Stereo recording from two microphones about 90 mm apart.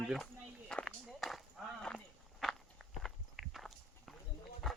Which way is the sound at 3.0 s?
Centre (ahead or behind).